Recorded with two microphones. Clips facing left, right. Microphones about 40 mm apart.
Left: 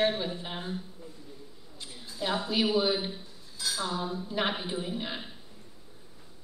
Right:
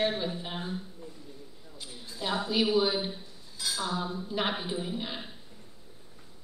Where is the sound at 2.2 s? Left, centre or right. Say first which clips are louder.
Even; centre.